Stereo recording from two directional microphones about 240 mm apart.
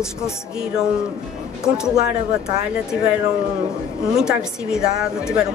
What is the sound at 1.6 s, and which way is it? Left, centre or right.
Speech, centre.